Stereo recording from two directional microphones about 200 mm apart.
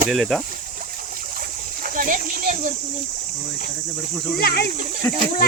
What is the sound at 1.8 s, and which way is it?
Speech, 45° right (ahead or behind).